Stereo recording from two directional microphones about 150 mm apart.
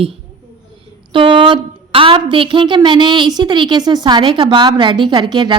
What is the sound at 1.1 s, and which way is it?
Speech, 35° right (ahead or behind).